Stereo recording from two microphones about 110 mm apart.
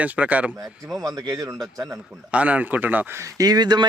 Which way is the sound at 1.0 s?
30° right (ahead or behind).